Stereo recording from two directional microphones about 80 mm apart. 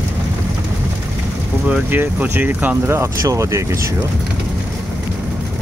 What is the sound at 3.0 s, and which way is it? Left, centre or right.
Speech, right.